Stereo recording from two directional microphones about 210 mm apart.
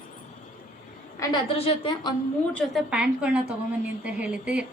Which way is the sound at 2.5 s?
Centre (ahead or behind).